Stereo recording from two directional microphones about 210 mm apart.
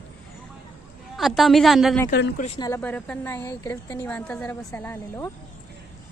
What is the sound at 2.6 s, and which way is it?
A woman's voice, 15° left (ahead or behind).